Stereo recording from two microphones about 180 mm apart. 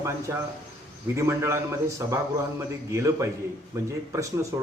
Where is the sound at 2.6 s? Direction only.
15° right (ahead or behind).